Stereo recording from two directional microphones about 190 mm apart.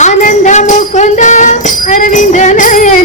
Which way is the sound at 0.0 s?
40° left (ahead or behind).